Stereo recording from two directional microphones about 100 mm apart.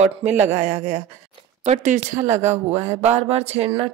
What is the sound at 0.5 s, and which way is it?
Mantra, 90° right.